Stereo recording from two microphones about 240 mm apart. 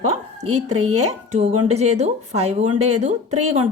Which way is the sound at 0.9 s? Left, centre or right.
Right.